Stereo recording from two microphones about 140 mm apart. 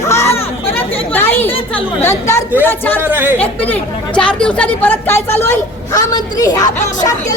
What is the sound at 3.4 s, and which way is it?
Speech, 10° left (ahead or behind).